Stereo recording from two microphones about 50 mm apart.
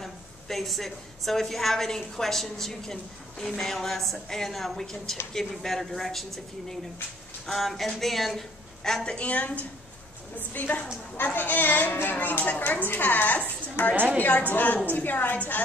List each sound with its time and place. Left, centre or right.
0.0 s a woman's voice: centre; by 13.5 s left
13.8 s a woman's voice: left
14.1 s a woman's voice: left